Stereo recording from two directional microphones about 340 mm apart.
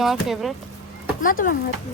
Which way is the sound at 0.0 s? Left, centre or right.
Centre.